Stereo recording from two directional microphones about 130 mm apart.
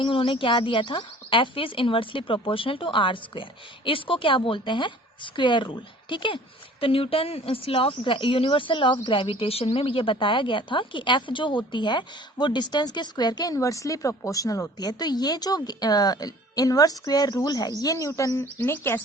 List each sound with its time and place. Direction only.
0.0 s speech: 40° left (ahead or behind); by 19.0 s 15° left (ahead or behind)